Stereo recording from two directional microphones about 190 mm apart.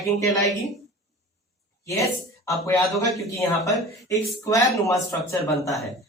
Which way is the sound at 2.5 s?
15° left (ahead or behind).